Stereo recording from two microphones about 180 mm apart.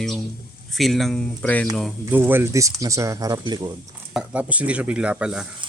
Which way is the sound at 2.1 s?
10° right (ahead or behind).